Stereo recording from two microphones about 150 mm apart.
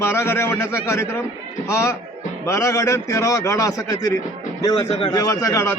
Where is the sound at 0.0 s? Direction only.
15° left (ahead or behind).